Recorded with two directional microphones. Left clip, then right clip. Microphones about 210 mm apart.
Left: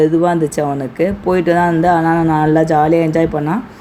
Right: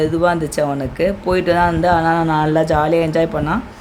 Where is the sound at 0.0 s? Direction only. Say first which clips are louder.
Left 3 dB; 10° right (ahead or behind).